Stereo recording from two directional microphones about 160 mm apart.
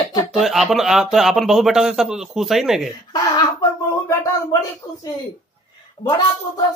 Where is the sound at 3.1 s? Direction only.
25° left (ahead or behind).